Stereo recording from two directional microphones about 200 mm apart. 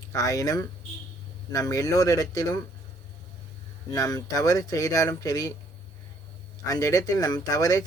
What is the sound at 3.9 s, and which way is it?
Speech, 20° left (ahead or behind).